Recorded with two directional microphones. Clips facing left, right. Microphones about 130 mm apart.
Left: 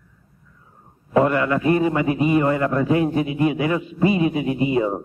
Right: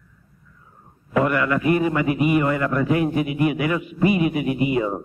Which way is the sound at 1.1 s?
30° left (ahead or behind).